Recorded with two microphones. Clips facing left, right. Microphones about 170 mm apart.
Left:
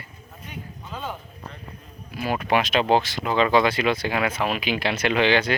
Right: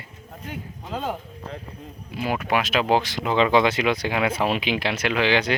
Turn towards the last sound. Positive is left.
turn(degrees=-5)  # may be behind; listen again after turning